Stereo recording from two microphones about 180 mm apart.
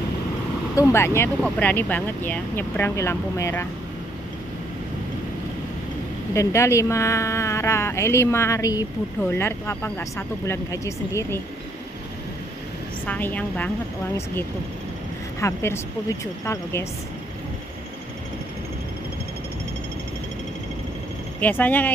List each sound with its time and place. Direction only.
0.7 s speech: 15° left (ahead or behind)
6.3 s speech: 15° left (ahead or behind)
13.0 s speech: 10° left (ahead or behind)
15.4 s speech: 15° left (ahead or behind)
21.4 s speech: 10° left (ahead or behind)